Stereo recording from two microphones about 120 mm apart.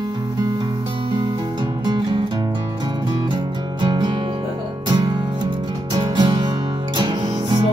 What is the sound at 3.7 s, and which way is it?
Music, 40° right (ahead or behind).